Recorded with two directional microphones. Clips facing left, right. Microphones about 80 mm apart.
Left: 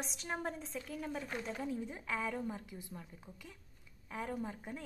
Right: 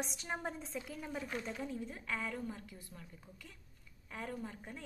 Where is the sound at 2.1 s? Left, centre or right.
Centre.